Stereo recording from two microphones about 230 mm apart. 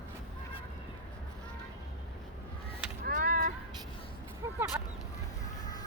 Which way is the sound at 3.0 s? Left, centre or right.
Right.